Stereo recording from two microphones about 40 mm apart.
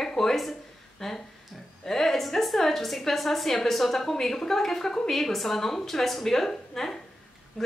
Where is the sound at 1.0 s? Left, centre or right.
Centre.